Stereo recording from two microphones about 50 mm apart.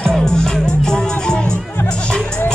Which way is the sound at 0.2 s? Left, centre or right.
Centre.